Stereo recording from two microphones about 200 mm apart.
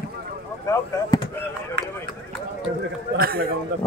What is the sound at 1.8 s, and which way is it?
Run, 55° right (ahead or behind).